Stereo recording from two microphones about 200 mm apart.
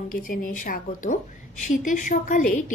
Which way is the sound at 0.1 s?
45° left (ahead or behind).